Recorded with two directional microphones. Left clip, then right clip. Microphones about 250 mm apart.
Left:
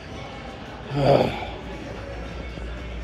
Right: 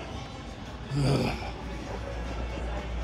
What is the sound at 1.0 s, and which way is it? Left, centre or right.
Speech, right.